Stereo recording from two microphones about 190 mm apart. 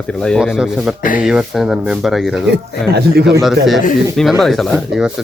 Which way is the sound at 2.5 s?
60° right (ahead or behind).